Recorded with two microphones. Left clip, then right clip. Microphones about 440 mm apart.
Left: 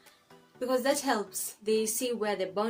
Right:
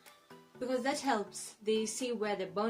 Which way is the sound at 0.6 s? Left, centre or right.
Right.